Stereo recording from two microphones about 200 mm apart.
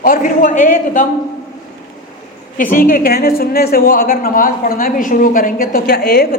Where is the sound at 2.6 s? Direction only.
40° left (ahead or behind).